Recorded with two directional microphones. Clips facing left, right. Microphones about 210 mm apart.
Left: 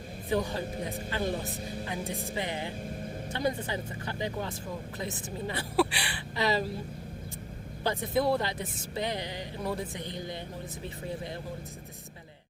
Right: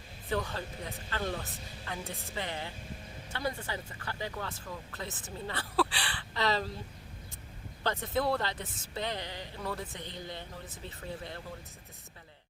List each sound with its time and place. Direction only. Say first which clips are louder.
0.3 s speech: left 4 dB; 15° left (ahead or behind)
7.9 s speech: left 3 dB; 10° left (ahead or behind)